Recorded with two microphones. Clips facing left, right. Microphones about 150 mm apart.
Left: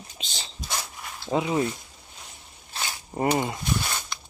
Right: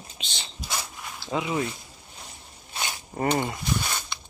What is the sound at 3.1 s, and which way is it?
Speech, 15° left (ahead or behind).